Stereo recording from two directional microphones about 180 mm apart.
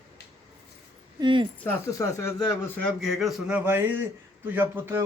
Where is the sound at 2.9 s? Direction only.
Centre (ahead or behind).